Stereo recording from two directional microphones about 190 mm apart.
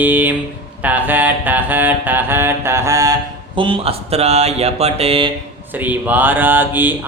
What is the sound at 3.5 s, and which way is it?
Speech, 25° right (ahead or behind).